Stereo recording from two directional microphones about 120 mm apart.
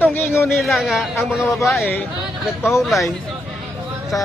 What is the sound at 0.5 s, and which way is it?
Speech, centre (ahead or behind).